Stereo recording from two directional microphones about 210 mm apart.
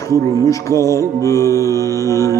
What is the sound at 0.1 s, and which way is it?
Mantra, 15° left (ahead or behind).